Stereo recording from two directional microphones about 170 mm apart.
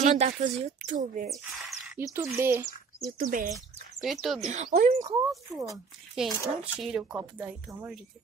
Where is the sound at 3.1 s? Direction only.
55° right (ahead or behind).